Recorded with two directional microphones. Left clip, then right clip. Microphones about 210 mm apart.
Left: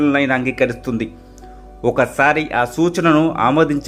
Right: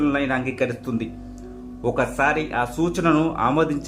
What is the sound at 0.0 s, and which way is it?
Speech, 20° left (ahead or behind).